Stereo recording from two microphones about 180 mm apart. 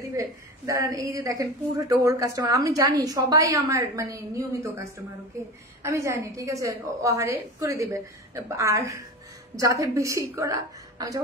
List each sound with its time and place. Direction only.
0.1 s a woman's voice: 20° right (ahead or behind)
5.8 s a woman's voice: 15° right (ahead or behind)